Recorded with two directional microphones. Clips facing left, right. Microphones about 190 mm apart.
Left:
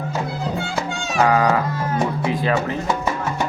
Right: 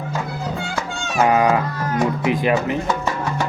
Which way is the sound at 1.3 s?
20° right (ahead or behind).